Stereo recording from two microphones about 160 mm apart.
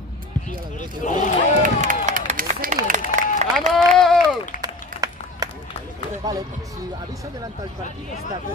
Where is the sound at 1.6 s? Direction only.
55° right (ahead or behind).